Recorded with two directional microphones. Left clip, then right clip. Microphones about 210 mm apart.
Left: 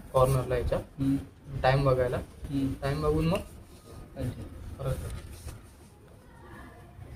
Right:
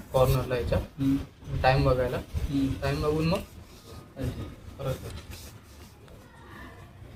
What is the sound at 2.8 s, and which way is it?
Speech, 25° left (ahead or behind).